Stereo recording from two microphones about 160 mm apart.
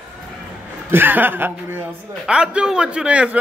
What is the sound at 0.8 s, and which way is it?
A man's voice, 10° right (ahead or behind).